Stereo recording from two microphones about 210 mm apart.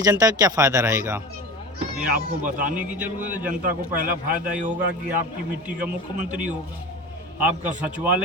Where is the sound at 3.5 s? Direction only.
40° right (ahead or behind).